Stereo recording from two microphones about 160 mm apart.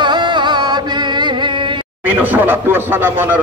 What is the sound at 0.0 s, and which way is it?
Music, 25° right (ahead or behind).